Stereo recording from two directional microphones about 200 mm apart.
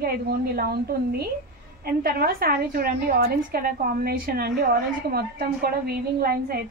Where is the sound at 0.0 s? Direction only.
50° right (ahead or behind).